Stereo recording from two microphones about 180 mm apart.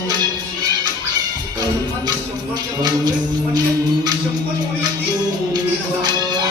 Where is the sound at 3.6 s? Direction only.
20° right (ahead or behind).